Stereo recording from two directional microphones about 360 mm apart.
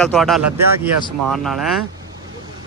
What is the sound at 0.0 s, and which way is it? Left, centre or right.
Speech, centre.